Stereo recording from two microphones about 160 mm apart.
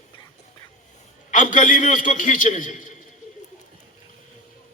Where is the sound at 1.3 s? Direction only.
50° left (ahead or behind).